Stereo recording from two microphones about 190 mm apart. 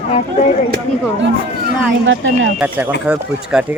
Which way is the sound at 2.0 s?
80° right.